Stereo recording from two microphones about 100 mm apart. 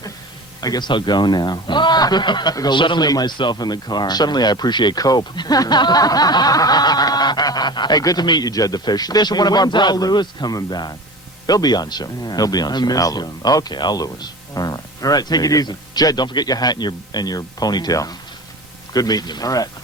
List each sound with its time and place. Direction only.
0.6 s speech: 45° left (ahead or behind)